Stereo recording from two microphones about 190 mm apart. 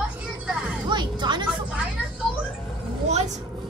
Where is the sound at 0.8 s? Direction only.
25° right (ahead or behind).